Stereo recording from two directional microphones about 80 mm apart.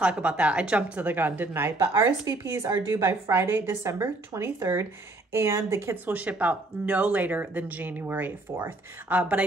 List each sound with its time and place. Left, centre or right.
0.0 s a woman's voice: centre
1.8 s a woman's voice: right
6.1 s speech: centre